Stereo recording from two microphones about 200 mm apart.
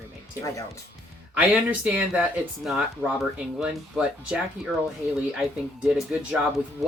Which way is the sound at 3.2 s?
5° right (ahead or behind).